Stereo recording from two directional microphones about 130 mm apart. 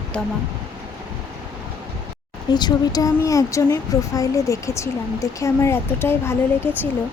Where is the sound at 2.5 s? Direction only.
30° left (ahead or behind).